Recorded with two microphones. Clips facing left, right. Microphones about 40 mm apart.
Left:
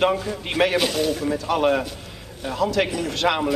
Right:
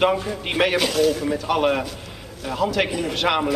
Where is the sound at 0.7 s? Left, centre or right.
Centre.